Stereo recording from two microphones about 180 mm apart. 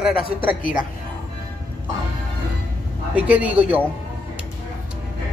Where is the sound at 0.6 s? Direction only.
50° left (ahead or behind).